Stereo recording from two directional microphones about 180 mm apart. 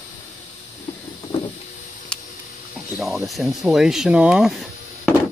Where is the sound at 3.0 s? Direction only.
Centre (ahead or behind).